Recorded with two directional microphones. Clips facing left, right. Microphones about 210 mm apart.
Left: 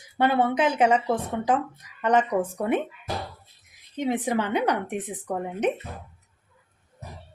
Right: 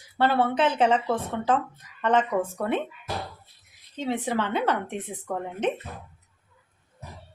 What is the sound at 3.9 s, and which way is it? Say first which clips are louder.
Speech: left 2 dB; 15° left (ahead or behind).